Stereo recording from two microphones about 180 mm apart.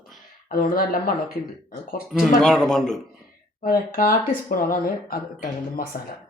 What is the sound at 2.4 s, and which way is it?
Speech, centre (ahead or behind).